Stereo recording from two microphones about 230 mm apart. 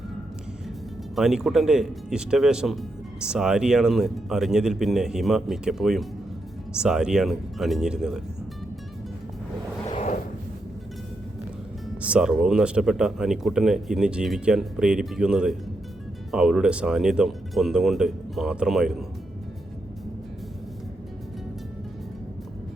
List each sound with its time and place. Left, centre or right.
1.1 s speech: centre
9.8 s a sound: left
12.0 s speech: centre